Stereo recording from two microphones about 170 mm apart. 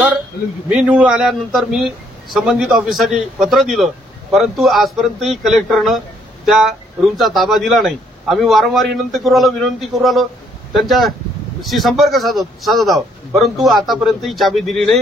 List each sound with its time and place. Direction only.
0.7 s a man's voice: 10° right (ahead or behind)